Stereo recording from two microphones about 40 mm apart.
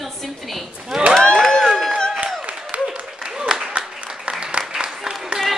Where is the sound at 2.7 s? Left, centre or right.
Right.